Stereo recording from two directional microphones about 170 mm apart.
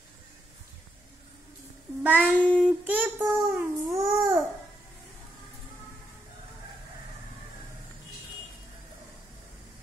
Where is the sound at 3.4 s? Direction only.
15° right (ahead or behind).